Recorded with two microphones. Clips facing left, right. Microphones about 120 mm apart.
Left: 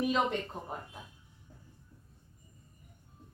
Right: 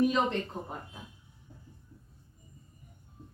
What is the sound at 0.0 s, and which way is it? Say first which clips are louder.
Speech: right 3 dB; 5° left (ahead or behind).